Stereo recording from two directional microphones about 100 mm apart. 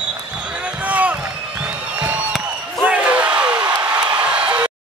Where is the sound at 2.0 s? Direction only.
15° right (ahead or behind).